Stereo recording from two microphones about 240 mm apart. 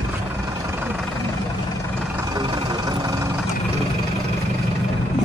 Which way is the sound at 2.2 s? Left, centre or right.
Centre.